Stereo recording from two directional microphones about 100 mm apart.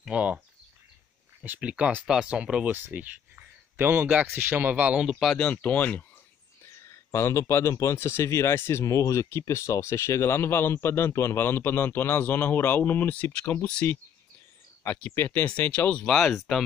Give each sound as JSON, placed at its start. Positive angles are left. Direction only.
{"t": 0.1, "sound": "speech", "side_deg": -15}
{"t": 1.4, "sound": "speech", "side_deg": -15}
{"t": 5.0, "sound": "speech", "side_deg": 5}
{"t": 6.6, "sound": "speech", "side_deg": 30}
{"t": 15.0, "sound": "speech", "side_deg": 20}